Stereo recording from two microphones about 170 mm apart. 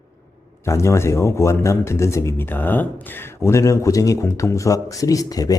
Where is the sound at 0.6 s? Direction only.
15° left (ahead or behind).